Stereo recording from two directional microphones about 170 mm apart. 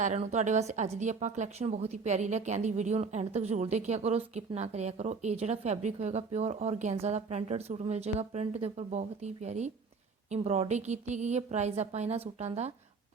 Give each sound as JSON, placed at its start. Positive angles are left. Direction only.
{"t": 0.0, "sound": "speech", "side_deg": -45}